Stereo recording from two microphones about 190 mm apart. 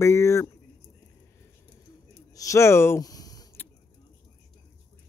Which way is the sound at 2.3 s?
15° left (ahead or behind).